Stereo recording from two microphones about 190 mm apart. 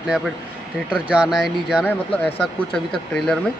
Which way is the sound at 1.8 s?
10° left (ahead or behind).